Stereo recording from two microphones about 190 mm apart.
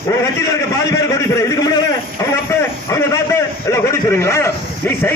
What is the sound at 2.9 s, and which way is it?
A man's voice, 15° left (ahead or behind).